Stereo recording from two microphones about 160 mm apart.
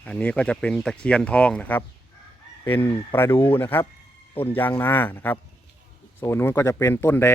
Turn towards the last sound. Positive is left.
turn(degrees=15)  # may be behind; listen again after turning